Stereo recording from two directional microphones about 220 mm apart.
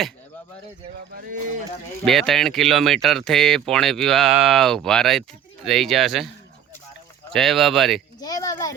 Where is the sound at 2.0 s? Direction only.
Centre (ahead or behind).